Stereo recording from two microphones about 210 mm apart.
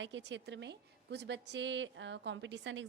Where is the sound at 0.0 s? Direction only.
60° right (ahead or behind).